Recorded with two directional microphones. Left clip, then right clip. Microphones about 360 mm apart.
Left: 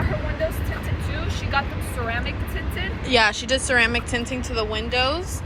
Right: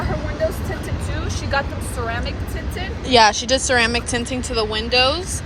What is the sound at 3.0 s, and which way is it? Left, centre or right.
Speech, centre.